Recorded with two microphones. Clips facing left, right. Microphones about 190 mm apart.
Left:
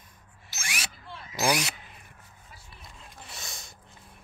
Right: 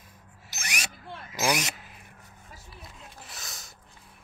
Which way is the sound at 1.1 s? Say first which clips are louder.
Right 2 dB; 50° right (ahead or behind).